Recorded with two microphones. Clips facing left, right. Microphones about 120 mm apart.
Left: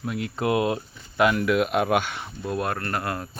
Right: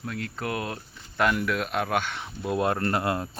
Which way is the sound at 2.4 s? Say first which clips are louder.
Right 2 dB; 20° right (ahead or behind).